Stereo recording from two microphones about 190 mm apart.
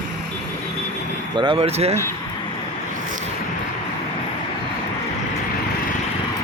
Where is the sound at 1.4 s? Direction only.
25° right (ahead or behind).